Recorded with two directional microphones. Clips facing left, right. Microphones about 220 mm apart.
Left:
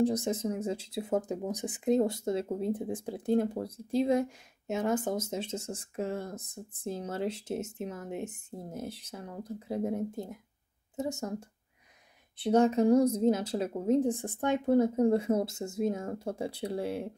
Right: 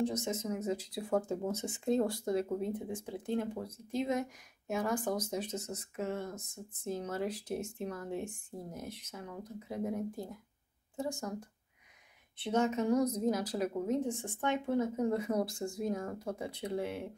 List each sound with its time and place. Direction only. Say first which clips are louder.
0.0 s speech: left 6 dB; 35° left (ahead or behind)
12.4 s a woman's voice: left 7 dB; 35° left (ahead or behind)